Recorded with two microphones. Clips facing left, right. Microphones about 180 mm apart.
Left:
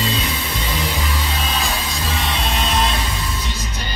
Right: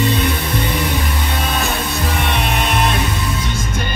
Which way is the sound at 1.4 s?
60° right (ahead or behind).